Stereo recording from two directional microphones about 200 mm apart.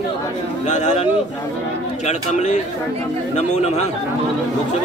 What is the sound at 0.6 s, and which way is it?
Speech, 35° left (ahead or behind).